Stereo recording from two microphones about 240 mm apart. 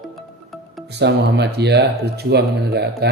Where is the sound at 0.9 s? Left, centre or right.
Right.